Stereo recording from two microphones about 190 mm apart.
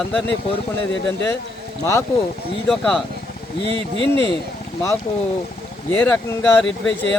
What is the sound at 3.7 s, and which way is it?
Speech, 30° right (ahead or behind).